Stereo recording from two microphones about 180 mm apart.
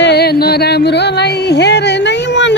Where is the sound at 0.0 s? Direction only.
65° left (ahead or behind).